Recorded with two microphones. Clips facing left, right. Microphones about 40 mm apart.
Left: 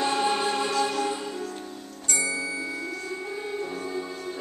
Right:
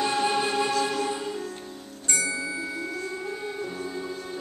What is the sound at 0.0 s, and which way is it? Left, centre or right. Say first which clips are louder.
Music: even; centre.